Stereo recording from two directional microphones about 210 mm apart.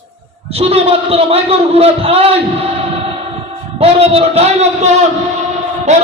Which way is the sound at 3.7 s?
30° right (ahead or behind).